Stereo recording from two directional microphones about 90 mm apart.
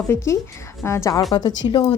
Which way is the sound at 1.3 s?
55° left (ahead or behind).